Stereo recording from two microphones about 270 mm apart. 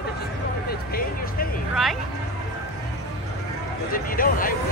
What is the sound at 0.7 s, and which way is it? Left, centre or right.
Music, left.